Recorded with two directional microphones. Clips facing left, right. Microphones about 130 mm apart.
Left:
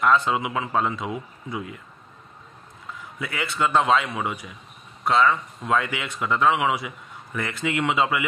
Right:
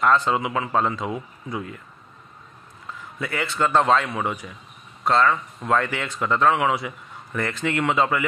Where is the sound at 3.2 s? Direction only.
5° left (ahead or behind).